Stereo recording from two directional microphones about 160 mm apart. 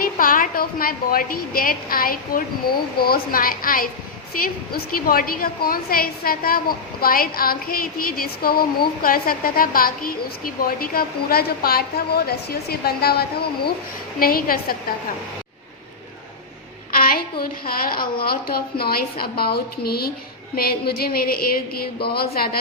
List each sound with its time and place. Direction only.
0.0 s a woman's voice: 60° left (ahead or behind); by 13.7 s 80° left
14.2 s a woman's voice: 65° left (ahead or behind)
16.9 s a woman's voice: 65° left (ahead or behind)
22.0 s speech: 80° left